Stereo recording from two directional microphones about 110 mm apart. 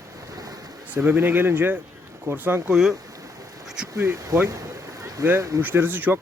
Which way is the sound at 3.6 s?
5° right (ahead or behind).